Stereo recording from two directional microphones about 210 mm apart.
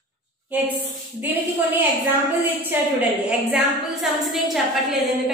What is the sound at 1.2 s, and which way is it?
A woman's voice, 10° right (ahead or behind).